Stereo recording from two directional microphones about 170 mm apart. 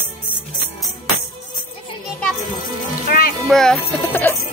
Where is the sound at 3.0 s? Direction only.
60° left (ahead or behind).